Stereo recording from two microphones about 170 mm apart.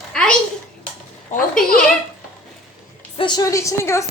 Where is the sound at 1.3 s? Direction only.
45° left (ahead or behind).